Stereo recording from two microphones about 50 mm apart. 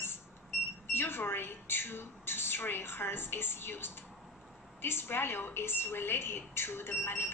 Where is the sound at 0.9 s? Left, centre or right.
Left.